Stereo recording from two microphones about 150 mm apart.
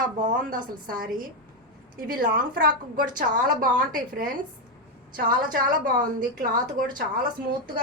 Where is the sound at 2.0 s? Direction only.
70° right (ahead or behind).